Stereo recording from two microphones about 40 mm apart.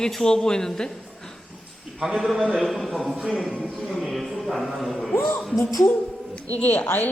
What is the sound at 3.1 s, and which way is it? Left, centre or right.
Speech, right.